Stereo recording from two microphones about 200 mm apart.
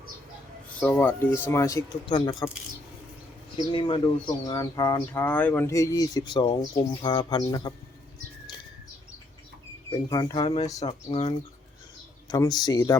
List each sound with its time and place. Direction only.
0.8 s speech: 10° left (ahead or behind)
3.7 s speech: 25° left (ahead or behind)
10.1 s speech: 20° left (ahead or behind)